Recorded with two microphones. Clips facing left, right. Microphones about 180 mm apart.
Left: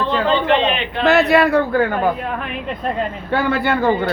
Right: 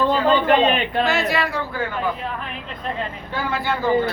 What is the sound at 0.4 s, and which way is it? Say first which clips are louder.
Speech: even; 40° right (ahead or behind).